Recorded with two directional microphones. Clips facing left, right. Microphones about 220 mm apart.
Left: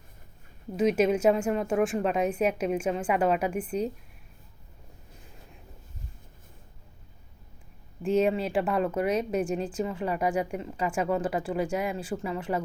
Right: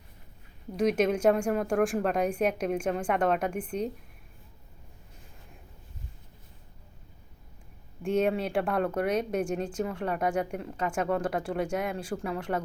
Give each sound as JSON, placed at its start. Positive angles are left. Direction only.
{"t": 0.8, "sound": "a woman's voice", "side_deg": 5}
{"t": 8.0, "sound": "speech", "side_deg": 5}